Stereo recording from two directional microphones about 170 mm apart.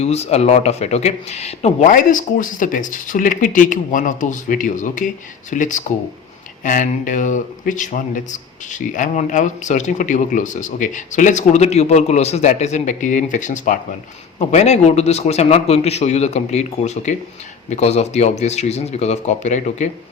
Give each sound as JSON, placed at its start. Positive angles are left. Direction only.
{"t": 0.0, "sound": "a man's voice", "side_deg": 40}